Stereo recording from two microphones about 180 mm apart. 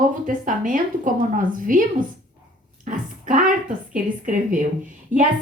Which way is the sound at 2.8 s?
50° right (ahead or behind).